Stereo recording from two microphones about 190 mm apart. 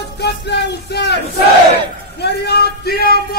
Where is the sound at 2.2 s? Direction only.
60° left (ahead or behind).